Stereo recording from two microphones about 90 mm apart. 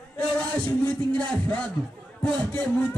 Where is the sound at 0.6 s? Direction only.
15° left (ahead or behind).